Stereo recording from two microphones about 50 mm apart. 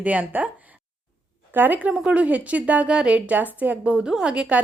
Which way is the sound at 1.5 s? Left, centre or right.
Right.